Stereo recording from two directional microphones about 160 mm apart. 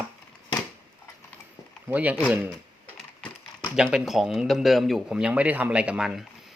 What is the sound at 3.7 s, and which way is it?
A man's voice, centre (ahead or behind).